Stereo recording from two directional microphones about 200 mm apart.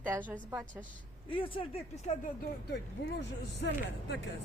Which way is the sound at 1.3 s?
25° left (ahead or behind).